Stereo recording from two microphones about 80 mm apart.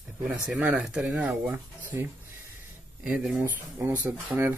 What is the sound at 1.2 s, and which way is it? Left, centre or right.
Speech, centre.